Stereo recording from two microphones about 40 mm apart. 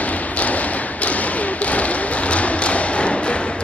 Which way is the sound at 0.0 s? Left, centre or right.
Left.